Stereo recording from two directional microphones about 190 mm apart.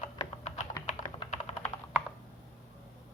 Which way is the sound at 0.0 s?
40° left (ahead or behind).